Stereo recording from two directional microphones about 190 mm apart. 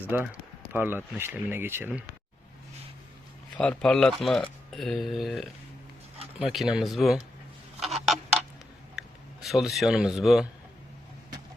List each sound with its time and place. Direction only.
0.1 s speech: 10° right (ahead or behind)
3.6 s speech: 5° left (ahead or behind)
7.8 s a sound: centre (ahead or behind)
9.0 s speech: centre (ahead or behind)